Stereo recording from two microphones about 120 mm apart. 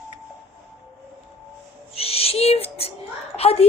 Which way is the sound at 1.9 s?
55° left (ahead or behind).